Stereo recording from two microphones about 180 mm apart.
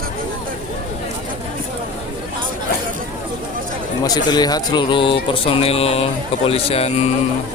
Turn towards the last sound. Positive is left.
turn(degrees=35)  # may be behind; listen again after turning